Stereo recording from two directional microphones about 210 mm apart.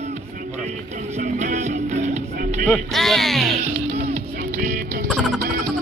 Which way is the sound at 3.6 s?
30° right (ahead or behind).